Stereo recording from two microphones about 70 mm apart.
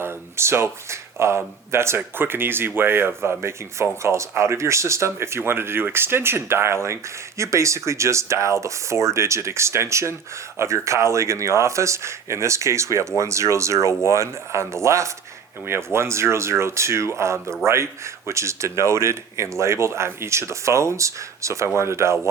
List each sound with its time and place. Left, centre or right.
0.0 s speech: right